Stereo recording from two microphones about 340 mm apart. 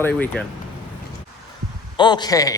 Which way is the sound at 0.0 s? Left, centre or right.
Centre.